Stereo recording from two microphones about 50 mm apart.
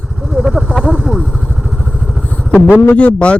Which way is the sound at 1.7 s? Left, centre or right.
Right.